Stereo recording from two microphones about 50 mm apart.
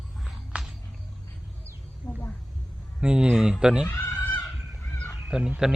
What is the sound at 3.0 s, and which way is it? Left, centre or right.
Speech, centre.